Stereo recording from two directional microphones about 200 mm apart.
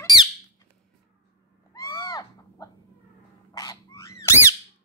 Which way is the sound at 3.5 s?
20° left (ahead or behind).